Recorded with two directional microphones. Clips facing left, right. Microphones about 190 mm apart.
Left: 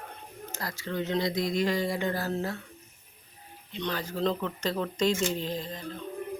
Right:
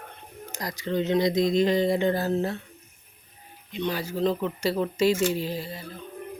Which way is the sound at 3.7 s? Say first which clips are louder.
Right 4 dB; 10° right (ahead or behind).